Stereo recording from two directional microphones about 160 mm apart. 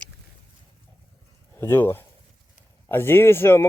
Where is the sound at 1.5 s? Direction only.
15° left (ahead or behind).